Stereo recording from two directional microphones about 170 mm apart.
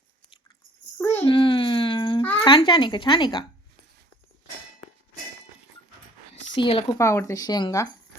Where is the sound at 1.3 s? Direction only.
30° left (ahead or behind).